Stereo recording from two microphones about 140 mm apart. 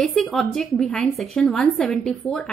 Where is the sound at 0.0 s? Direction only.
5° left (ahead or behind).